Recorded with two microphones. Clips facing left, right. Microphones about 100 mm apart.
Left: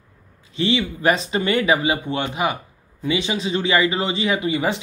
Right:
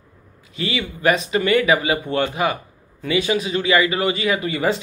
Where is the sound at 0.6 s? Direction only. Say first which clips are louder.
Left 4 dB; 30° left (ahead or behind).